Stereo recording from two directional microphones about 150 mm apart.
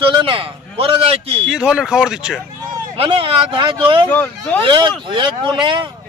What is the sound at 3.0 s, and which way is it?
A man's voice, 35° right (ahead or behind).